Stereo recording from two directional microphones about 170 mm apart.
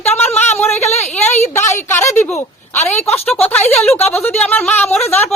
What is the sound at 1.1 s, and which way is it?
Speech, 5° left (ahead or behind).